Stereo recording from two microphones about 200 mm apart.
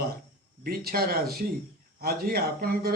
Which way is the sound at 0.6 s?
50° right (ahead or behind).